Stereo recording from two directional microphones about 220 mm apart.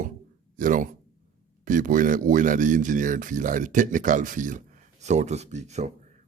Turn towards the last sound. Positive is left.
turn(degrees=-30)  # may be behind; listen again after turning